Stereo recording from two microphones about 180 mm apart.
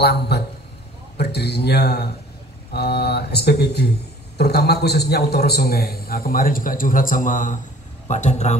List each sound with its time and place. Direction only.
0.0 s a man's voice: 65° left (ahead or behind); by 8.5 s 40° left (ahead or behind)